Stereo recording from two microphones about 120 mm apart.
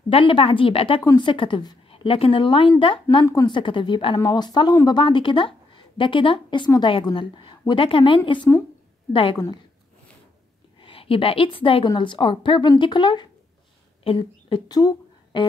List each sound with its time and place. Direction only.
0.1 s a woman's voice: 50° left (ahead or behind)
1.9 s a woman's voice: 50° left (ahead or behind)
10.8 s a woman's voice: 45° left (ahead or behind)
14.8 s a sound: 30° left (ahead or behind)